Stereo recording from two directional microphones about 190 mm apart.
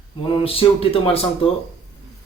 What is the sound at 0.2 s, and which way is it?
Speech, 30° left (ahead or behind).